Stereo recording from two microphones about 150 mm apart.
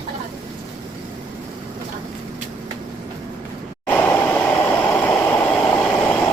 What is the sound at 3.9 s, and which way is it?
Vehicle, 10° left (ahead or behind).